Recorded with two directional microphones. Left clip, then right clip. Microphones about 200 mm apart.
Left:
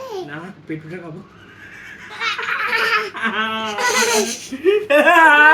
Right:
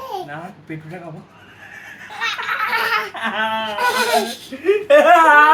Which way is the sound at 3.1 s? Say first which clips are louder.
Even; 10° right (ahead or behind).